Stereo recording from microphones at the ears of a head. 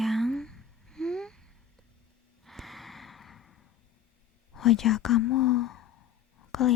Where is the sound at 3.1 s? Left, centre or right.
Left.